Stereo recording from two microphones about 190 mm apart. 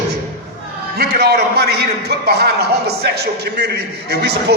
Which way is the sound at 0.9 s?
55° right (ahead or behind).